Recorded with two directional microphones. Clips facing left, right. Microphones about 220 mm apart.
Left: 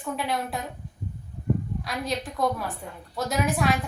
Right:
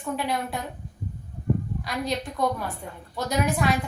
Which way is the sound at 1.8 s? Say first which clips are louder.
Right 1 dB; centre (ahead or behind).